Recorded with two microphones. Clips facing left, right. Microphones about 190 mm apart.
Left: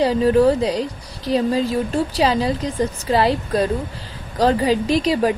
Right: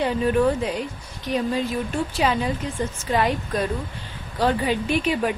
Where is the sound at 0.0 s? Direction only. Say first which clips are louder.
Left 5 dB; 35° left (ahead or behind).